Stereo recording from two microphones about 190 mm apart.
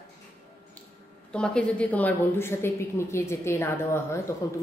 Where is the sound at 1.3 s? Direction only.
5° left (ahead or behind).